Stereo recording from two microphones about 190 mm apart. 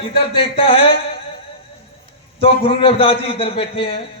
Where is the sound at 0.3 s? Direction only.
30° left (ahead or behind).